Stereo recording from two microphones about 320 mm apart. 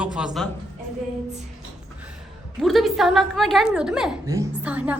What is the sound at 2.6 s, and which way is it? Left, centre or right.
A woman's voice, centre.